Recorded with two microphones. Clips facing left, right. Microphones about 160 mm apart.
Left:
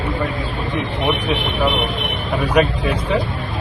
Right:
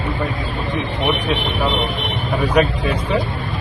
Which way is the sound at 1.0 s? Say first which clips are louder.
Even; 10° left (ahead or behind).